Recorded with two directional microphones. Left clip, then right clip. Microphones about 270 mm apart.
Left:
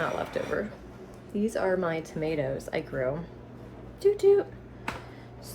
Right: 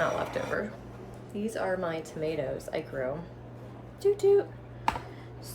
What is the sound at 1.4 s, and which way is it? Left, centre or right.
A woman's voice, centre.